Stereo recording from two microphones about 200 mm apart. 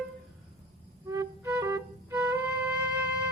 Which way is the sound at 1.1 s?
15° right (ahead or behind).